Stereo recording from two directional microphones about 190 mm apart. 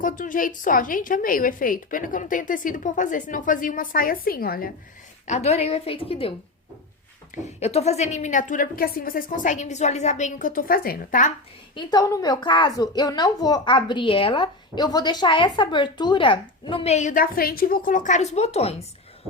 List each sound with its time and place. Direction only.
0.0 s a woman's voice: 45° left (ahead or behind)
5.2 s a woman's voice: 35° left (ahead or behind)
7.4 s a woman's voice: 35° left (ahead or behind)
11.7 s a woman's voice: 25° left (ahead or behind)